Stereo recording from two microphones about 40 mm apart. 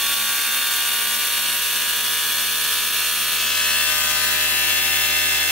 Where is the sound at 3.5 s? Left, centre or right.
Centre.